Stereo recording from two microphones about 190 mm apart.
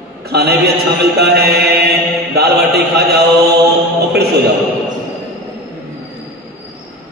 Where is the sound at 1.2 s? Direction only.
60° right (ahead or behind).